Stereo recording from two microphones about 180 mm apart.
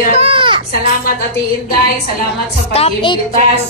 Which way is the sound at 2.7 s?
30° left (ahead or behind).